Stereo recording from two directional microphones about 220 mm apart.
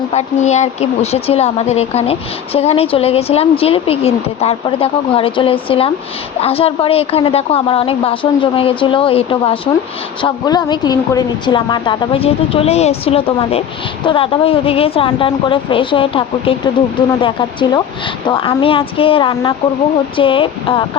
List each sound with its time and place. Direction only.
0.1 s speech: 30° left (ahead or behind)